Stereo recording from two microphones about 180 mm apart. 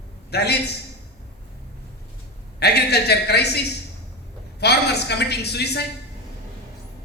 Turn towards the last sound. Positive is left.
turn(degrees=65)  # may be behind; listen again after turning